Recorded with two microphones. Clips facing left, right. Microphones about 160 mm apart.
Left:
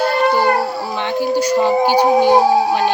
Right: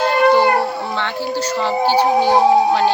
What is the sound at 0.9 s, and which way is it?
Howl, 15° left (ahead or behind).